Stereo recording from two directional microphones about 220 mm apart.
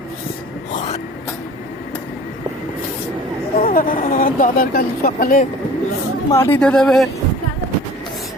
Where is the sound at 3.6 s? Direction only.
40° left (ahead or behind).